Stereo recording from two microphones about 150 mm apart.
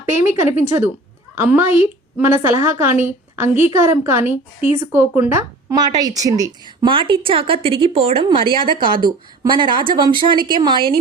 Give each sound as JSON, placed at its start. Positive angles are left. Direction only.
{"t": 0.0, "sound": "a woman's voice", "side_deg": -15}
{"t": 6.9, "sound": "speech", "side_deg": -35}